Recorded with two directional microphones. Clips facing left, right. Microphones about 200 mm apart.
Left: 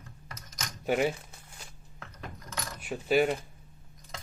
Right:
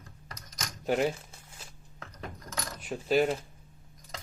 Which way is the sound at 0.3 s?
30° right (ahead or behind).